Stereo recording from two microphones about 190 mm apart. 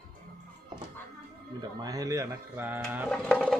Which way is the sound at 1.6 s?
20° right (ahead or behind).